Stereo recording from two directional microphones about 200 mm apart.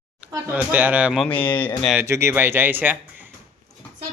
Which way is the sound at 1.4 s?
25° left (ahead or behind).